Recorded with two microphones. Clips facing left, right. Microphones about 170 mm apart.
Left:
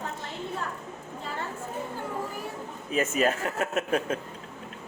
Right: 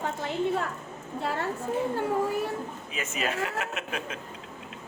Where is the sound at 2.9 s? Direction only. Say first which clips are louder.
Left 6 dB; 45° left (ahead or behind).